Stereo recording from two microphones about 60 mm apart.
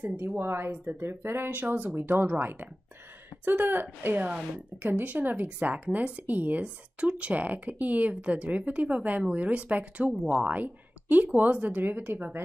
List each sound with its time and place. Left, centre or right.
0.0 s speech: right
0.4 s speech: right